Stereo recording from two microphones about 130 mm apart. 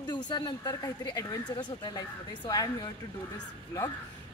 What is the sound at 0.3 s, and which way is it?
Speech, 30° left (ahead or behind).